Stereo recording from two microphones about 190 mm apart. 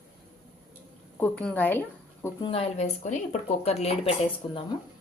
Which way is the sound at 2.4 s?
30° left (ahead or behind).